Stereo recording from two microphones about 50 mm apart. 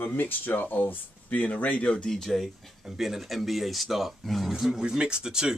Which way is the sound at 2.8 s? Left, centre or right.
Centre.